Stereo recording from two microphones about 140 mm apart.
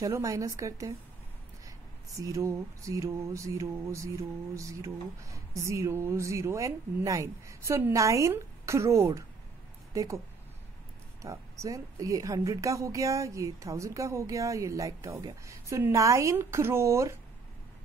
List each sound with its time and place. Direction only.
0.0 s mantra: 25° right (ahead or behind)
2.1 s mantra: 25° right (ahead or behind)
11.2 s mantra: 25° right (ahead or behind)